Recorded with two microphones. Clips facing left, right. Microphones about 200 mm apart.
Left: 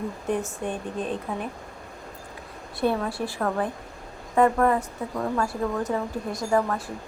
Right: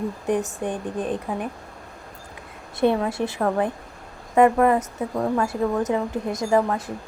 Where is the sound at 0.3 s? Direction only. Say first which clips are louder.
Right 3 dB; 15° right (ahead or behind).